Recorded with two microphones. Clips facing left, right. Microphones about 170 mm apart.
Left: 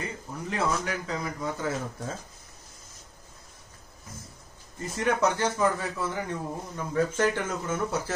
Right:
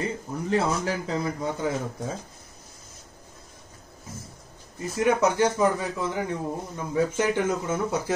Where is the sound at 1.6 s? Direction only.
15° right (ahead or behind).